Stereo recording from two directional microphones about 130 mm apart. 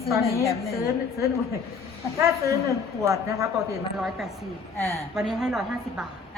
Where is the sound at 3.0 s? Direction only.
25° right (ahead or behind).